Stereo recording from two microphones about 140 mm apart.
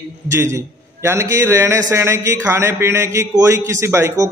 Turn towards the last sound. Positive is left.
turn(degrees=-20)  # may be behind; listen again after turning